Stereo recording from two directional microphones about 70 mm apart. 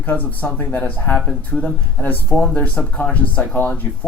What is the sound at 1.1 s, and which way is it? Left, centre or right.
Speech, left.